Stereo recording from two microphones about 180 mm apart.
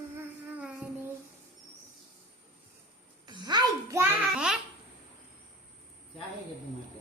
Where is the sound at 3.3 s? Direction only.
25° right (ahead or behind).